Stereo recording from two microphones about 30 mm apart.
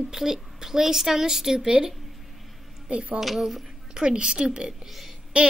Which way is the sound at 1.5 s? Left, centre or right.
Right.